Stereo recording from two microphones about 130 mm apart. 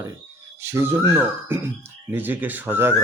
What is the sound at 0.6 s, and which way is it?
Speech, 20° right (ahead or behind).